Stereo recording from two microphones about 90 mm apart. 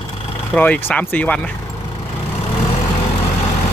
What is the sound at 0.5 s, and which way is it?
Speech, 20° left (ahead or behind).